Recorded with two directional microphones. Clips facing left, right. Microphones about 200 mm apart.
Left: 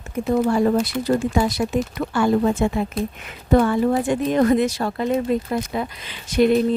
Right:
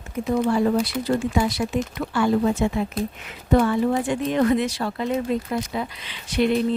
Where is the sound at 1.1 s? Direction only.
45° left (ahead or behind).